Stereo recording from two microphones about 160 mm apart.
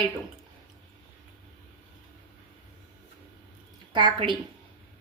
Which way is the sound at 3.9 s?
30° right (ahead or behind).